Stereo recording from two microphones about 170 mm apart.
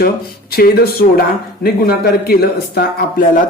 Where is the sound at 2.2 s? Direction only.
65° left (ahead or behind).